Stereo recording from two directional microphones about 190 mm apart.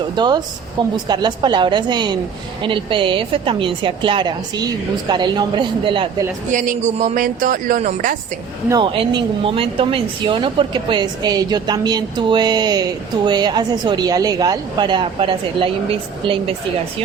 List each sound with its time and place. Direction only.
0.2 s speech: 25° right (ahead or behind)
6.5 s speech: 40° right (ahead or behind)
8.7 s speech: 25° right (ahead or behind)